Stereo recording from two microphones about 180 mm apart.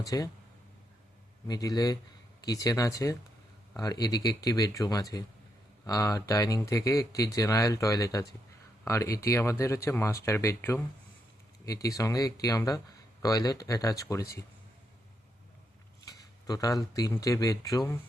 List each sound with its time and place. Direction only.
0.0 s speech: 20° left (ahead or behind)
1.5 s speech: 20° left (ahead or behind)
16.0 s speech: 20° left (ahead or behind)